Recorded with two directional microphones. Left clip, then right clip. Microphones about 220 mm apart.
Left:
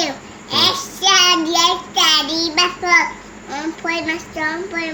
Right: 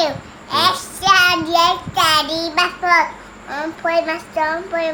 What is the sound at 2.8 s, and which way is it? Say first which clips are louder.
A woman's voice: even; 45° right (ahead or behind).